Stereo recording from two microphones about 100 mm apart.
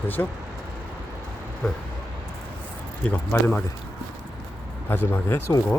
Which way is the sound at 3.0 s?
15° left (ahead or behind).